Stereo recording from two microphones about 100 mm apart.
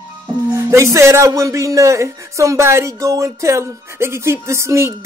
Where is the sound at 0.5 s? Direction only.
30° right (ahead or behind).